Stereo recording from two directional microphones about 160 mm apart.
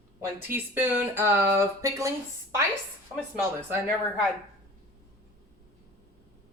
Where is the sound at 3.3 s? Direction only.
15° right (ahead or behind).